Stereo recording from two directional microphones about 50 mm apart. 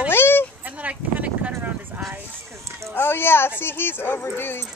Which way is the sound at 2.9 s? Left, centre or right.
Left.